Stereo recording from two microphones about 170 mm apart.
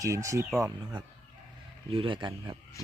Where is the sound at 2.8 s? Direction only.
20° left (ahead or behind).